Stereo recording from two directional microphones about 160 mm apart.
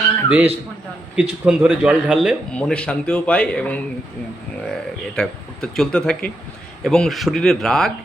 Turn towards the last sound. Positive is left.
turn(degrees=5)  # may be behind; listen again after turning